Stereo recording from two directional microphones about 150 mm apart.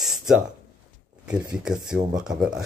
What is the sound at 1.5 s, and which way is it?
Speech, 5° right (ahead or behind).